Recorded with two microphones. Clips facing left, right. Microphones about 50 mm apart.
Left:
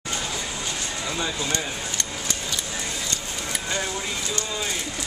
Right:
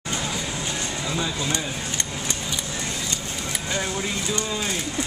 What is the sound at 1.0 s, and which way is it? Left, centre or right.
Speech, centre.